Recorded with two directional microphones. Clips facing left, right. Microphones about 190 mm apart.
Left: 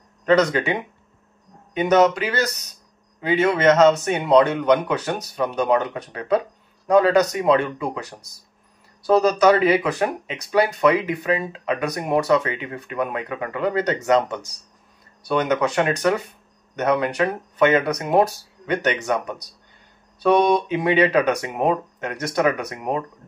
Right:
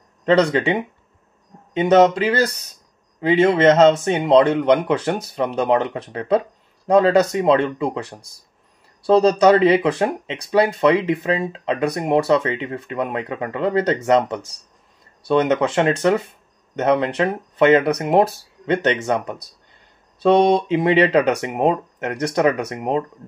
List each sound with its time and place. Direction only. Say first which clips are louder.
0.2 s speech: right 2 dB; 30° right (ahead or behind)